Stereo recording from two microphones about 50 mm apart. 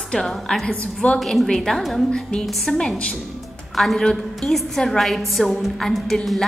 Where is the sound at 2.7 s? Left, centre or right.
Centre.